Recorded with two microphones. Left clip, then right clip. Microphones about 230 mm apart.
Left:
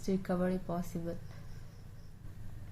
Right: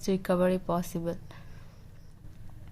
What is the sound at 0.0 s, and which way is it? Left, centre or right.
A woman's voice, right.